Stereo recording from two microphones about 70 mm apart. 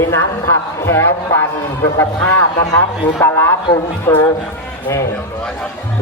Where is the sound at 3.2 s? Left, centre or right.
Left.